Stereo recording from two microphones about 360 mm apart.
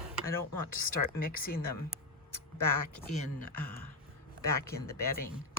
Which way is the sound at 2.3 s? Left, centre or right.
Left.